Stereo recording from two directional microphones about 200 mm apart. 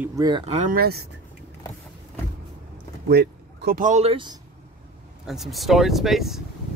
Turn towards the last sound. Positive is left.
turn(degrees=0)  # may be behind; listen again after turning